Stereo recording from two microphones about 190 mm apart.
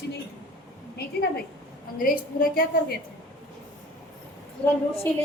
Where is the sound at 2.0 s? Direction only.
45° left (ahead or behind).